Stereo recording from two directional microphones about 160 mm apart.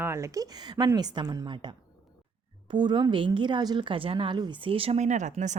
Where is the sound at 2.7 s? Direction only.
30° right (ahead or behind).